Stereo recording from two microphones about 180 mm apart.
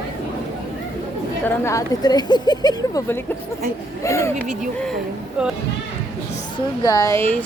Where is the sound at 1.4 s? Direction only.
15° left (ahead or behind).